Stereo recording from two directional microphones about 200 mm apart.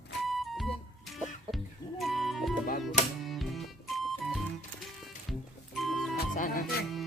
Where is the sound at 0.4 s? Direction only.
Centre (ahead or behind).